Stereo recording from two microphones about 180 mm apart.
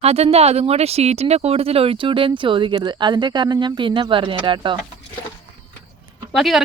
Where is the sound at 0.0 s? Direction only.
35° right (ahead or behind).